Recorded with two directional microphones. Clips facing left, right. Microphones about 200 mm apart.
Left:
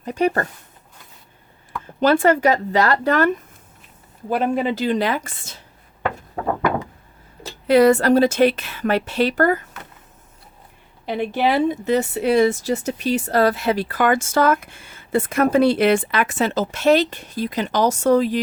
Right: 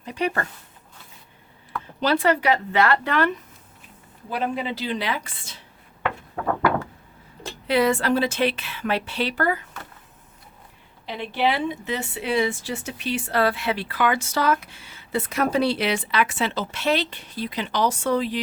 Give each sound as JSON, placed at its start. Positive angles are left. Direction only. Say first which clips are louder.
{"t": 0.0, "sound": "speech", "louder": "left 6 dB", "side_deg": 45}
{"t": 2.0, "sound": "speech", "louder": "left 5 dB", "side_deg": 50}
{"t": 6.4, "sound": "a sound", "louder": "left 1 dB", "side_deg": 20}
{"t": 7.7, "sound": "speech", "louder": "left 7 dB", "side_deg": 45}
{"t": 11.0, "sound": "speech", "louder": "left 4 dB", "side_deg": 50}